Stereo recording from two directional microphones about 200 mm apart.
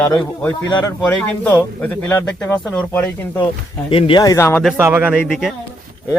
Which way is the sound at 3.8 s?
25° left (ahead or behind).